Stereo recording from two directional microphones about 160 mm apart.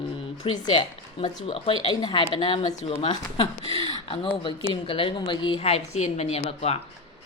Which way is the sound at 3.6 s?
35° right (ahead or behind).